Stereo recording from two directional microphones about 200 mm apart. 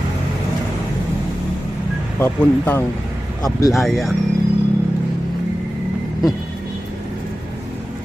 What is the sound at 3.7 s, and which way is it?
Speech, centre (ahead or behind).